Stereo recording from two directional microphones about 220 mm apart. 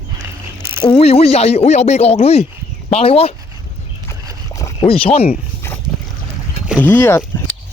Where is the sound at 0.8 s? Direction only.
25° left (ahead or behind).